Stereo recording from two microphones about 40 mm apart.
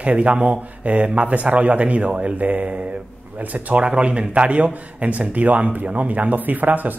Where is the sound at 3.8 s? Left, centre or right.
Right.